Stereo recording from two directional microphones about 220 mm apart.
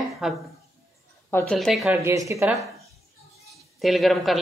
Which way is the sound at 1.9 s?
15° right (ahead or behind).